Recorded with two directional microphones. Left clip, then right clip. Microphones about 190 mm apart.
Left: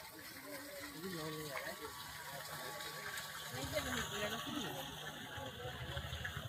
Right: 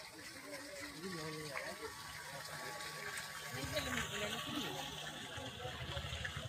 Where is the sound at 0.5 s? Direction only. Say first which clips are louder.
Right 1 dB; 5° left (ahead or behind).